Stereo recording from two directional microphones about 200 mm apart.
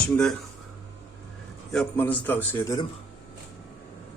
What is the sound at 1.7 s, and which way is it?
A man's voice, 5° left (ahead or behind).